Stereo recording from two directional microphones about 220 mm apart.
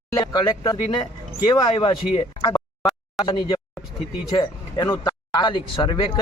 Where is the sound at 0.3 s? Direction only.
20° left (ahead or behind).